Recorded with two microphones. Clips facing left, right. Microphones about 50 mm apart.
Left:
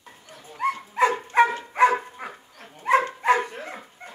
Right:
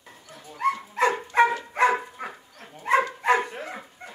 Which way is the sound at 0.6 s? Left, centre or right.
Centre.